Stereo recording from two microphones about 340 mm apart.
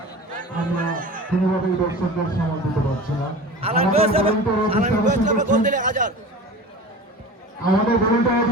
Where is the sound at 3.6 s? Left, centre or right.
Centre.